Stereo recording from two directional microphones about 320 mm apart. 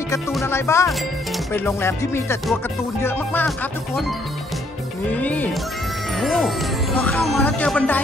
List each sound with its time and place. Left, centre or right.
0.1 s music: centre
3.0 s speech: centre
5.1 s speech: centre